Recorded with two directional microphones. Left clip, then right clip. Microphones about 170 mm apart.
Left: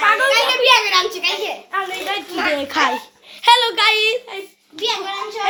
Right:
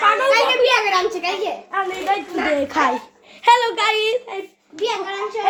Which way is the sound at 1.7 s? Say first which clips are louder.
Even; centre (ahead or behind).